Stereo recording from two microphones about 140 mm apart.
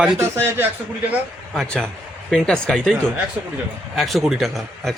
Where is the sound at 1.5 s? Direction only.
5° left (ahead or behind).